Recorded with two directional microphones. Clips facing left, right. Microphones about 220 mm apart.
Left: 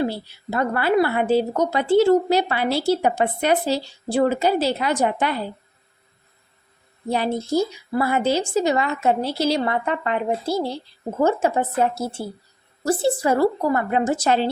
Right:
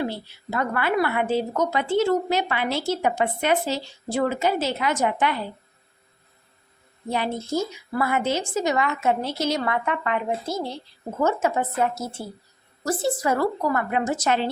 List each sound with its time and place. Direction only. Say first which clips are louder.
0.0 s a woman's voice: left 4 dB; 35° left (ahead or behind)
7.1 s a woman's voice: left 4 dB; 35° left (ahead or behind)